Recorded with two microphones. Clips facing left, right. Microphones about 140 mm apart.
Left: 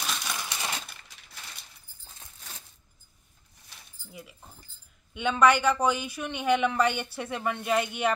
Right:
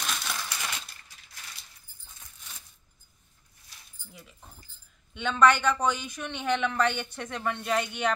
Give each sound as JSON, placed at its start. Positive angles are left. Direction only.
{"t": 0.0, "sound": "coin", "side_deg": 0}
{"t": 0.4, "sound": "coin", "side_deg": 25}
{"t": 2.0, "sound": "a sound", "side_deg": 30}
{"t": 4.1, "sound": "speech", "side_deg": 5}